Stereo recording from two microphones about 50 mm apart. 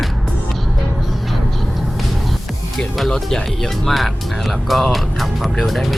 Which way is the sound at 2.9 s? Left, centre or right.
Centre.